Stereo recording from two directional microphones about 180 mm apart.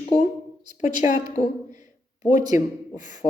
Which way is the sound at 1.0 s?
40° left (ahead or behind).